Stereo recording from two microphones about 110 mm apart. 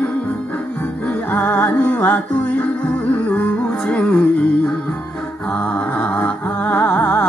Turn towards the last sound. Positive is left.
turn(degrees=10)  # may be behind; listen again after turning